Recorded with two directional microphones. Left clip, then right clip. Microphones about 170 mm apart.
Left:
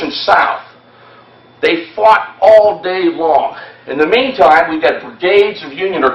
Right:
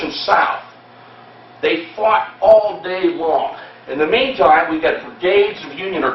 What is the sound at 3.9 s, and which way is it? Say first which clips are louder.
Speech: left 4 dB; 35° left (ahead or behind).